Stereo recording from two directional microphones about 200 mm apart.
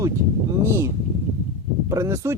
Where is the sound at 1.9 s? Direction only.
15° right (ahead or behind).